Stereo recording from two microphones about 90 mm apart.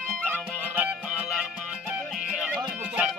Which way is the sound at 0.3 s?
15° right (ahead or behind).